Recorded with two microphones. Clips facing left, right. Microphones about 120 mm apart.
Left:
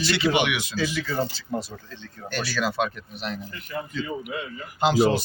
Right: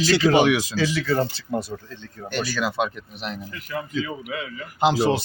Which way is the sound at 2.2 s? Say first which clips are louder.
Right 1 dB; 15° right (ahead or behind).